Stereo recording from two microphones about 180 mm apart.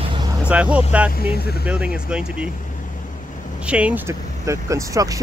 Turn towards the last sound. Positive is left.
turn(degrees=-20)  # may be behind; listen again after turning